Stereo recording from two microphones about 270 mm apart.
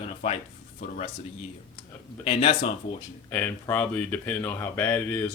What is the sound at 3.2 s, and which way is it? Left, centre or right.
Speech, centre.